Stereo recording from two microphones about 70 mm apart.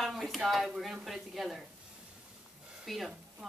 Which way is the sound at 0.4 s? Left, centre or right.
Centre.